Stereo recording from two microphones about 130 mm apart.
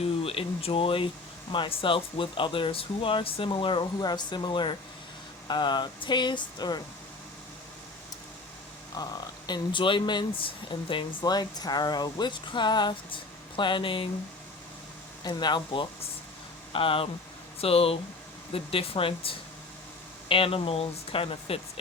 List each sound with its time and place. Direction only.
0.0 s speech: 50° left (ahead or behind); by 6.8 s 35° left (ahead or behind)
9.0 s speech: 30° left (ahead or behind)
15.2 s speech: 35° left (ahead or behind)